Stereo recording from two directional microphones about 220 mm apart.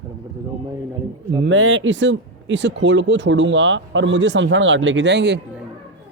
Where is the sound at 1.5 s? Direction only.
60° right (ahead or behind).